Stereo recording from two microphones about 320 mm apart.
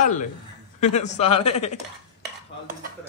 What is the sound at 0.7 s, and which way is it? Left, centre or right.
Speech, left.